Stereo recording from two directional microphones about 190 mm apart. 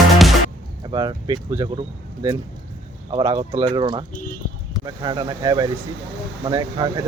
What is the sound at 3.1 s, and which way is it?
Speech, 25° right (ahead or behind).